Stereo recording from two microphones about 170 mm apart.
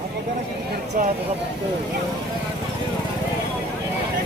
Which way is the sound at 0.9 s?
55° right (ahead or behind).